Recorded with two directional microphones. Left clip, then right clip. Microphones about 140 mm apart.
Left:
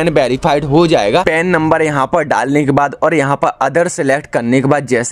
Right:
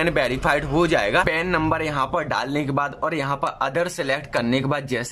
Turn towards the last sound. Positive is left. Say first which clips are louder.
# left 11 dB
turn(degrees=45)  # may be behind; listen again after turning